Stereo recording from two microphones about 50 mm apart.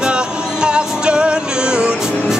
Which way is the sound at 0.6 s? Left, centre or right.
Centre.